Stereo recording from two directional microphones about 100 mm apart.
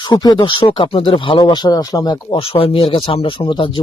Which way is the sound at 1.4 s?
45° left (ahead or behind).